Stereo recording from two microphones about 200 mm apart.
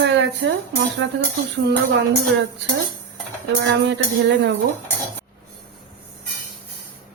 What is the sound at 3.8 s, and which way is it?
Speech, 60° right (ahead or behind).